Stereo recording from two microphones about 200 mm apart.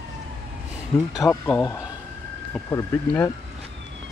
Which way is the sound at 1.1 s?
15° left (ahead or behind).